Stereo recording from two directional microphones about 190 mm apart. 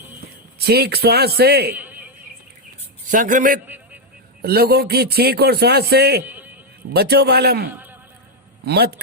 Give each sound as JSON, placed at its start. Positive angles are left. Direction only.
{"t": 0.6, "sound": "a man's voice", "side_deg": -60}
{"t": 1.7, "sound": "a sound", "side_deg": -10}
{"t": 3.1, "sound": "a man's voice", "side_deg": -45}
{"t": 4.4, "sound": "a man's voice", "side_deg": -55}
{"t": 6.2, "sound": "a sound", "side_deg": -10}
{"t": 6.9, "sound": "a man's voice", "side_deg": -60}